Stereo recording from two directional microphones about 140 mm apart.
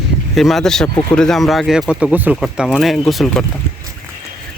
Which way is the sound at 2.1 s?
10° right (ahead or behind).